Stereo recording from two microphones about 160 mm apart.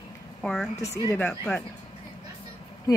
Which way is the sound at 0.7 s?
20° left (ahead or behind).